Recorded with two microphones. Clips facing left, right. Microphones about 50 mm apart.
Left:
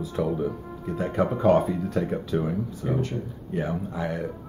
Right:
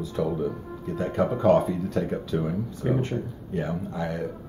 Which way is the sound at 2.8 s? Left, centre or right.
Right.